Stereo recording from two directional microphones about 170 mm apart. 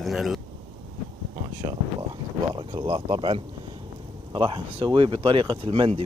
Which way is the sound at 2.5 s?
30° right (ahead or behind).